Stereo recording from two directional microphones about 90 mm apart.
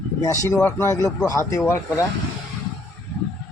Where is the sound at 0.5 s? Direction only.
35° left (ahead or behind).